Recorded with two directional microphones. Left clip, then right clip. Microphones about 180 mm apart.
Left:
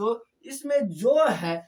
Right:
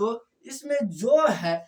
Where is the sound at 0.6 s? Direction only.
25° left (ahead or behind).